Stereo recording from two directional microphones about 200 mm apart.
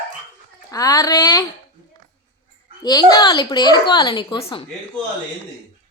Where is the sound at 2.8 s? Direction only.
20° left (ahead or behind).